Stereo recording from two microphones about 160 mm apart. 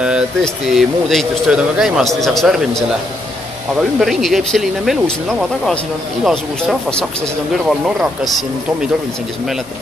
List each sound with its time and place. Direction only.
0.4 s speech: centre (ahead or behind)
4.0 s speech: centre (ahead or behind)